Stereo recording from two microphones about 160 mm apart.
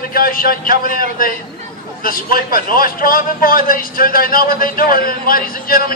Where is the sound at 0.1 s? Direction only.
65° left (ahead or behind).